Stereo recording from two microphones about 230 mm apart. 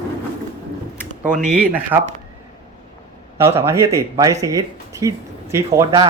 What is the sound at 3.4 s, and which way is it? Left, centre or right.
Speech, centre.